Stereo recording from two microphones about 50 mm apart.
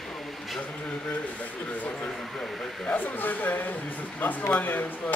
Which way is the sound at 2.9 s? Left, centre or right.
Left.